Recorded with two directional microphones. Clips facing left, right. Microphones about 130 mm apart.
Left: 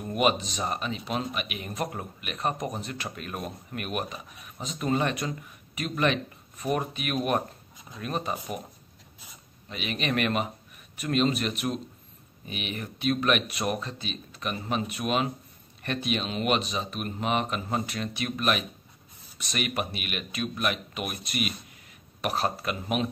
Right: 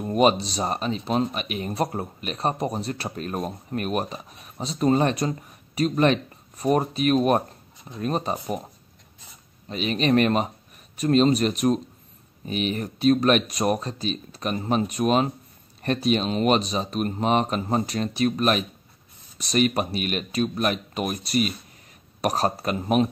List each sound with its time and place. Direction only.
0.0 s speech: 35° right (ahead or behind)
9.7 s speech: 35° right (ahead or behind)